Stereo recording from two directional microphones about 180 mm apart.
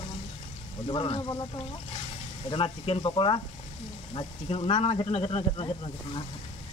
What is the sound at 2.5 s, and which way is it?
A man's voice, 30° left (ahead or behind).